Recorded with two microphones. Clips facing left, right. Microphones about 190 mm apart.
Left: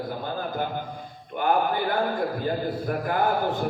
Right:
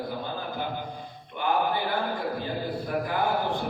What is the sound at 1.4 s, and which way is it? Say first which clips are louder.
A man's voice: left 3 dB; 45° left (ahead or behind).